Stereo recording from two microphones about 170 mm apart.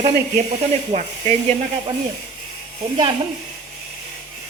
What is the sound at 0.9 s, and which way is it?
Speech, 45° right (ahead or behind).